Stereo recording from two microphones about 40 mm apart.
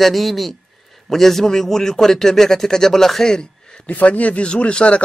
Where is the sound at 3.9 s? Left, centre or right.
Left.